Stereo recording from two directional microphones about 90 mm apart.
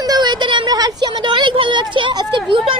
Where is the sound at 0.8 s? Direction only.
45° right (ahead or behind).